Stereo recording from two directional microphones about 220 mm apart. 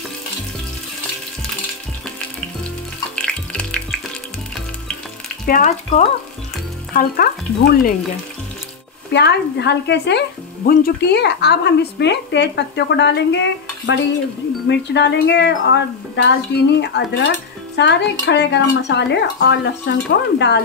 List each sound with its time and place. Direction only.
3.2 s music: 5° left (ahead or behind)
5.5 s frying: 35° left (ahead or behind)
9.1 s a woman's voice: 50° left (ahead or behind)